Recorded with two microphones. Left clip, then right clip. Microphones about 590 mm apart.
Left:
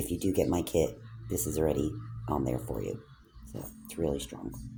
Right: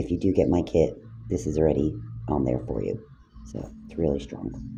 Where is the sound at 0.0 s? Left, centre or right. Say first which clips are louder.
Right 6 dB; left.